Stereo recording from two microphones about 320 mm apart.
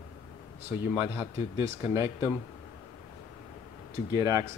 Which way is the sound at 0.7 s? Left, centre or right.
Centre.